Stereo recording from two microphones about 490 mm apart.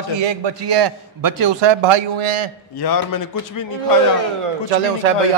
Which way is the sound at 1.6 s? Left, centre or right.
Right.